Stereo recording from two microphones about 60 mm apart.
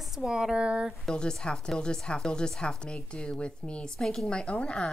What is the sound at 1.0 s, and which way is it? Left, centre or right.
Speech, centre.